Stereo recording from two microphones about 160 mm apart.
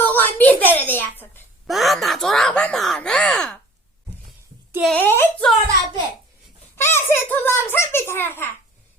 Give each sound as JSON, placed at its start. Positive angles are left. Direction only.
{"t": 0.0, "sound": "a woman's voice", "side_deg": 10}
{"t": 1.6, "sound": "speech", "side_deg": 0}
{"t": 4.8, "sound": "a child's voice", "side_deg": 5}
{"t": 6.7, "sound": "a child's voice", "side_deg": 15}